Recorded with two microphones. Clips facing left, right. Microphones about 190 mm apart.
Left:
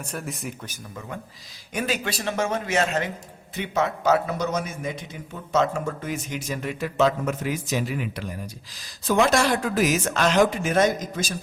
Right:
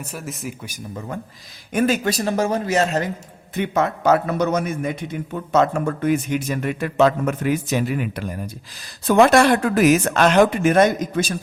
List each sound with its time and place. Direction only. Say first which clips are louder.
0.0 s speech: right 2 dB; 5° right (ahead or behind)
0.9 s speech: right 5 dB; 45° right (ahead or behind)
3.5 s a man's voice: right 4 dB; 55° right (ahead or behind)